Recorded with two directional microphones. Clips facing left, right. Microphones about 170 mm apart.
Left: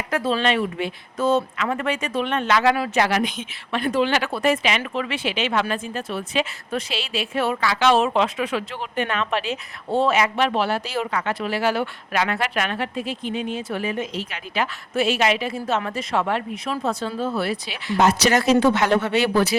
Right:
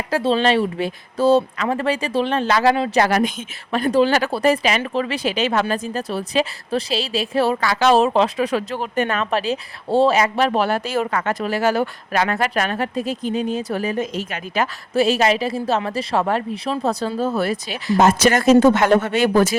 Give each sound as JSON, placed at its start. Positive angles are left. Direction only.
{"t": 0.1, "sound": "speech", "side_deg": -30}
{"t": 3.0, "sound": "speech", "side_deg": -40}